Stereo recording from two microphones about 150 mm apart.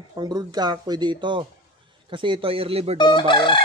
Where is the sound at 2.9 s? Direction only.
30° left (ahead or behind).